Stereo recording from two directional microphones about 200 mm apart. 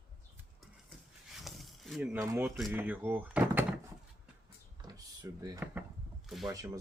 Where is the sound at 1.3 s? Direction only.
Centre (ahead or behind).